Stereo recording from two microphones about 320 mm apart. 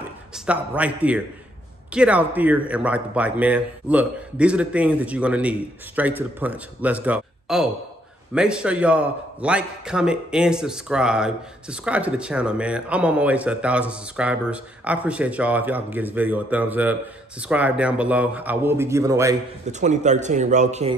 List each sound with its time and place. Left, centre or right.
0.5 s a man's voice: centre
19.6 s speech: right